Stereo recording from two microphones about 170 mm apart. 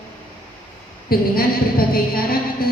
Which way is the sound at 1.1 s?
60° left (ahead or behind).